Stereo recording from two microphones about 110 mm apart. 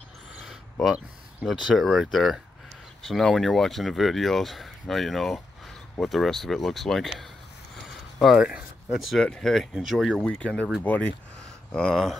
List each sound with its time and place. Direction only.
0.4 s speech: centre (ahead or behind); by 11.1 s 15° left (ahead or behind)
11.7 s speech: 5° left (ahead or behind)